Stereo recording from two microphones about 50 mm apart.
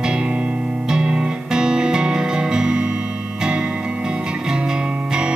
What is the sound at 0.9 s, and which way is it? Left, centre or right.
Music, centre.